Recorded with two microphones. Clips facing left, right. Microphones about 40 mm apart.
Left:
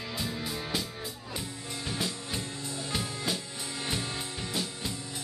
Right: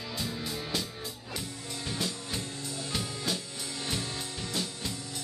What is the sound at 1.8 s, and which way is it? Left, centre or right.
Music, centre.